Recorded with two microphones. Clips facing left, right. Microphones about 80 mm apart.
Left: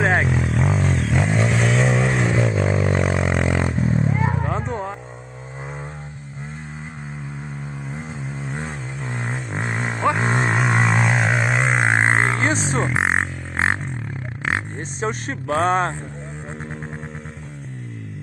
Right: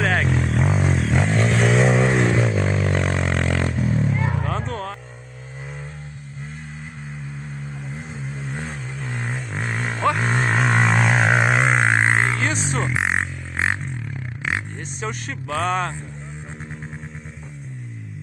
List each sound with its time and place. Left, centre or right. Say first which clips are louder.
0.0 s vehicle: left 2 dB; left
0.3 s vehicle: even; centre
3.7 s vehicle: left 1 dB; left
8.5 s vehicle: left 1 dB; left
10.5 s a sound: even; centre
11.8 s a sound: left 1 dB; left
14.4 s vehicle: left 2 dB; left